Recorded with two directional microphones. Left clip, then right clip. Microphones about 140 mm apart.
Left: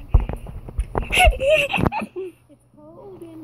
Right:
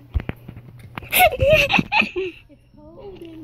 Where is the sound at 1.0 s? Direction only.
10° right (ahead or behind).